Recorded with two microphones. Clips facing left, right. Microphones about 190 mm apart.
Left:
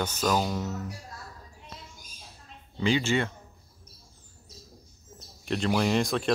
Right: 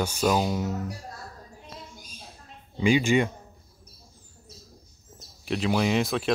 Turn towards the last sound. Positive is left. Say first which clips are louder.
# right 1 dB
turn(degrees=0)  # may be behind; listen again after turning